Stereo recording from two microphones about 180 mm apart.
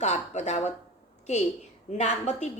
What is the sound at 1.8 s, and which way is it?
Speech, 40° left (ahead or behind).